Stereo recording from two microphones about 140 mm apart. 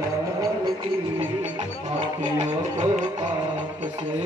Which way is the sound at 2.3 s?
55° right (ahead or behind).